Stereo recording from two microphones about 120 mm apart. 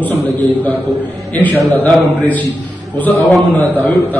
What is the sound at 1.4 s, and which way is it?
A man's voice, 15° left (ahead or behind).